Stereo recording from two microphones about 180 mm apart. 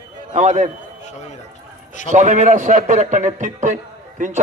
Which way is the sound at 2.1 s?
40° right (ahead or behind).